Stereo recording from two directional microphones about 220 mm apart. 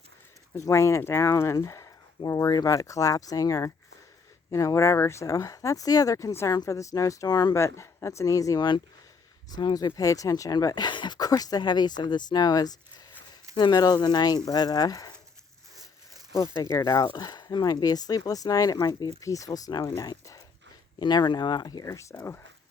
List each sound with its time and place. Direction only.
0.5 s speech: 15° left (ahead or behind)
16.3 s speech: 15° left (ahead or behind)